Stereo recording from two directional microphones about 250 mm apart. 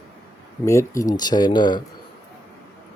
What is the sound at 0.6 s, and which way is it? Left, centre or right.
Speech, centre.